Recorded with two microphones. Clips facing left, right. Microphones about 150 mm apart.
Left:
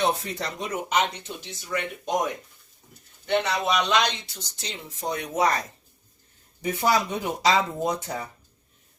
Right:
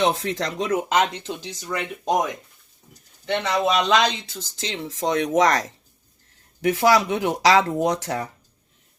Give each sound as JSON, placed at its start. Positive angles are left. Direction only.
{"t": 0.0, "sound": "speech", "side_deg": -90}
{"t": 3.2, "sound": "speech", "side_deg": -90}